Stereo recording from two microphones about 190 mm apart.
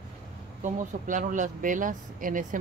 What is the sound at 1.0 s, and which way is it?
Speech, 40° right (ahead or behind).